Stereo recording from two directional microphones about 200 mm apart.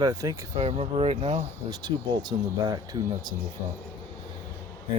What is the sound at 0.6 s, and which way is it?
Speech, 30° right (ahead or behind).